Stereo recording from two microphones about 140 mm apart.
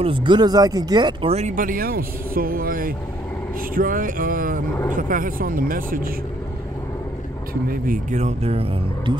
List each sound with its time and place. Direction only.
0.0 s speech: 35° right (ahead or behind)
1.5 s speech: 80° right
3.7 s speech: 80° right
7.7 s speech: 80° right
8.2 s speech: 50° right (ahead or behind)